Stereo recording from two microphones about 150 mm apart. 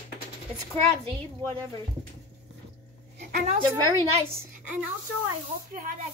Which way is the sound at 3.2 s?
90° right.